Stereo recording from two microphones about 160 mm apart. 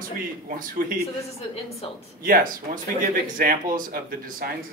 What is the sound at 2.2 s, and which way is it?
Speech, 60° right (ahead or behind).